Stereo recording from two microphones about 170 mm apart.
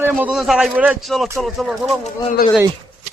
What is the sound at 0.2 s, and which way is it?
Speech, 5° right (ahead or behind).